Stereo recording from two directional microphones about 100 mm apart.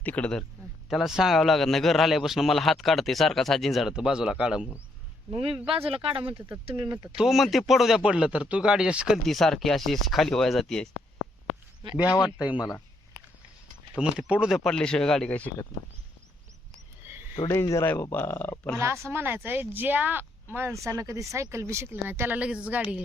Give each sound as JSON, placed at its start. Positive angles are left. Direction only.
{"t": 0.0, "sound": "speech", "side_deg": 15}
{"t": 0.9, "sound": "a man's voice", "side_deg": -5}
{"t": 5.3, "sound": "speech", "side_deg": -70}
{"t": 6.3, "sound": "speech", "side_deg": -25}
{"t": 7.2, "sound": "a man's voice", "side_deg": 0}
{"t": 12.0, "sound": "speech", "side_deg": 45}
{"t": 12.4, "sound": "speech", "side_deg": -10}
{"t": 14.0, "sound": "speech", "side_deg": -10}
{"t": 14.6, "sound": "speech", "side_deg": 5}
{"t": 17.0, "sound": "a sound", "side_deg": -25}
{"t": 17.5, "sound": "speech", "side_deg": 30}
{"t": 18.8, "sound": "speech", "side_deg": -30}
{"t": 20.9, "sound": "speech", "side_deg": -35}